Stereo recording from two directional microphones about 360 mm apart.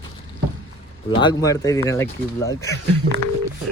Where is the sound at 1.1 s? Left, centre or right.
Centre.